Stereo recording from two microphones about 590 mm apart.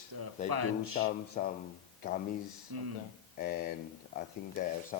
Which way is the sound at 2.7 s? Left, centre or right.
Right.